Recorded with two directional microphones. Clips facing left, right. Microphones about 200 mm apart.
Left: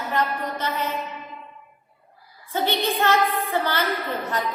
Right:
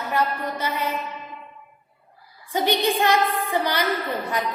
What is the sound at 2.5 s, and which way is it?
A woman's voice, 15° right (ahead or behind).